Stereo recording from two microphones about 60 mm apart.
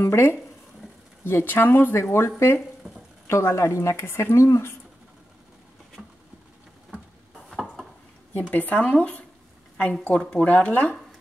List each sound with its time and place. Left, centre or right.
0.0 s speech: left
6.0 s a sound: centre
8.3 s speech: left
10.3 s speech: left